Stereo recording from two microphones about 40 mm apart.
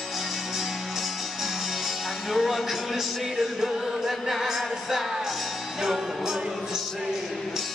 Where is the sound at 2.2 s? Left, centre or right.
Centre.